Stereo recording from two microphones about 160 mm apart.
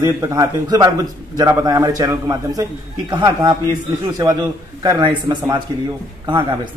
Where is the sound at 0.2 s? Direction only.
20° right (ahead or behind).